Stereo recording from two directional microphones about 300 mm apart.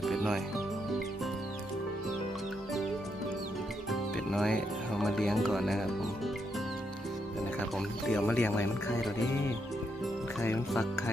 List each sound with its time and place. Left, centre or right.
0.0 s music: centre
3.8 s music: centre
7.8 s speech: centre
10.4 s speech: centre